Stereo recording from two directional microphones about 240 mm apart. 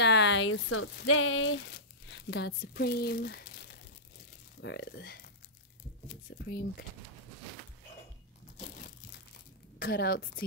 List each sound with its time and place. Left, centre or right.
0.0 s speech: left
6.3 s speech: left
8.5 s crushing: left
9.8 s a woman's voice: left